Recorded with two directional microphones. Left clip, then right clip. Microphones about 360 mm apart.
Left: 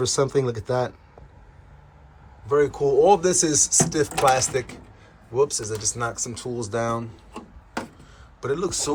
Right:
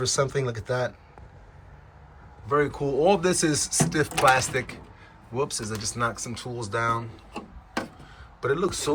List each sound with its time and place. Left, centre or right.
0.0 s speech: centre
2.5 s speech: centre